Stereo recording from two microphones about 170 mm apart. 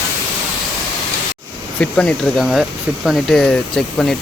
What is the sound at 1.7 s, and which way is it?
Speech, 5° left (ahead or behind).